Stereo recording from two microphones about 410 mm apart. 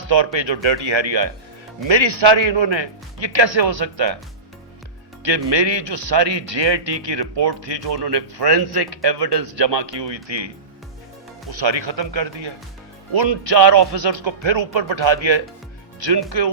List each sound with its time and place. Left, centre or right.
0.1 s speech: right
5.5 s speech: right
11.6 s speech: right